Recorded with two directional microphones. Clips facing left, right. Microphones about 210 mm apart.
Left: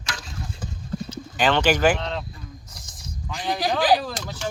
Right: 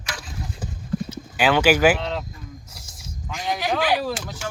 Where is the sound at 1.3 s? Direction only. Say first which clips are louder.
Right 2 dB; 10° right (ahead or behind).